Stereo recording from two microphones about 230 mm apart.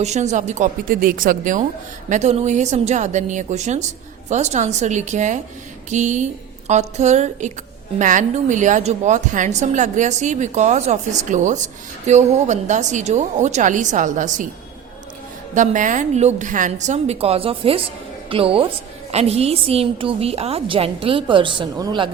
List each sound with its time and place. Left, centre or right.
0.0 s a woman's voice: right
15.5 s a woman's voice: right